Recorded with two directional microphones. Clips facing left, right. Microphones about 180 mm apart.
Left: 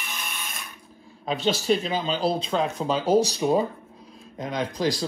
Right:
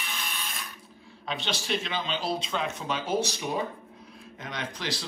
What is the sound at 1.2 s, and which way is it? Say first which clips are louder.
A man's voice: left 9 dB; 40° left (ahead or behind).